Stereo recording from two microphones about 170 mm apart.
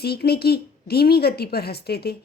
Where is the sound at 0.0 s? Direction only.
70° left (ahead or behind).